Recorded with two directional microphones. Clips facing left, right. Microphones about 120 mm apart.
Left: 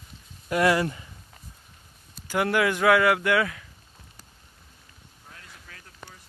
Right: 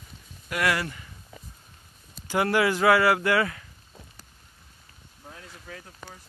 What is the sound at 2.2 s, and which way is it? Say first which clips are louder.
Speech: even; 5° right (ahead or behind).